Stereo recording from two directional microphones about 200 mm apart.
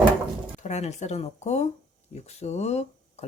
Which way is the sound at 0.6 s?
35° left (ahead or behind).